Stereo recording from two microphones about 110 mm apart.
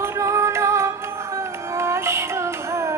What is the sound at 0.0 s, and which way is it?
Music, 30° right (ahead or behind).